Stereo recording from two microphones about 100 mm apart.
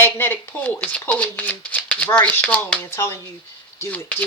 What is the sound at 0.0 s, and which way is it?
Speech, 20° left (ahead or behind).